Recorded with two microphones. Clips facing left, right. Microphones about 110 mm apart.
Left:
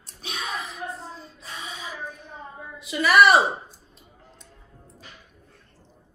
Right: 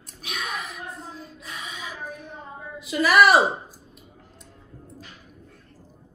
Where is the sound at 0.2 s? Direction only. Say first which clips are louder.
Even; 30° left (ahead or behind).